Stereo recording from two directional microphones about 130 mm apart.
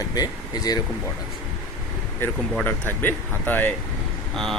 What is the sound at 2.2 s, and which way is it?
Speech, 15° left (ahead or behind).